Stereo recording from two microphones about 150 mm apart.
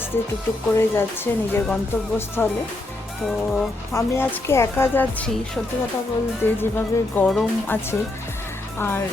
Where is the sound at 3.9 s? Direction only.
20° left (ahead or behind).